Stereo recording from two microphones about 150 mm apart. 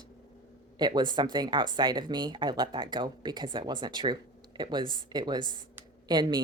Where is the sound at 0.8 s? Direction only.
30° right (ahead or behind).